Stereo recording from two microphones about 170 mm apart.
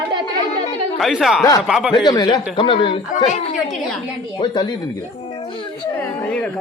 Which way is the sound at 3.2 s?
45° left (ahead or behind).